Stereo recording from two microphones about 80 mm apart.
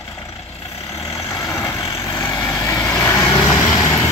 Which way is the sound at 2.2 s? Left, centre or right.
Left.